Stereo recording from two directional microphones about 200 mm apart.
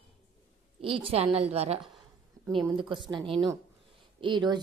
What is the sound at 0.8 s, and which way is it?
A woman's voice, 25° right (ahead or behind).